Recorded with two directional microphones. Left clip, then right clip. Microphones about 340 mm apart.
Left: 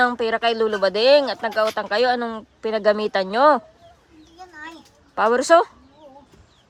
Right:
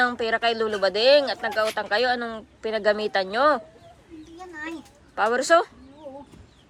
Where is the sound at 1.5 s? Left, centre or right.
Centre.